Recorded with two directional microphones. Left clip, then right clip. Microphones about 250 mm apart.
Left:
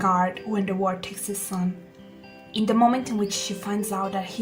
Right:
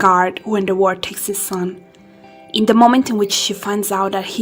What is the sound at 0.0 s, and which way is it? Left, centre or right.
A woman's voice, right.